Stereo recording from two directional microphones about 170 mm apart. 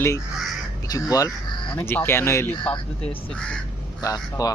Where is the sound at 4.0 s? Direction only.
20° left (ahead or behind).